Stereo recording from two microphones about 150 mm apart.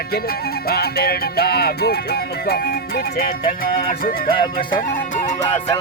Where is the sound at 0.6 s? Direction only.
90° left.